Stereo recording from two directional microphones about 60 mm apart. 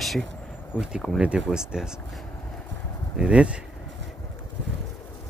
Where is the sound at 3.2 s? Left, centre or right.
Centre.